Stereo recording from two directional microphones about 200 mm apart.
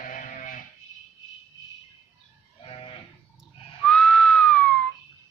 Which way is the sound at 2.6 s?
25° left (ahead or behind).